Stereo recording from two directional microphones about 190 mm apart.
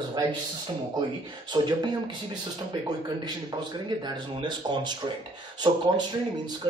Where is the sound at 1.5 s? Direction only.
25° right (ahead or behind).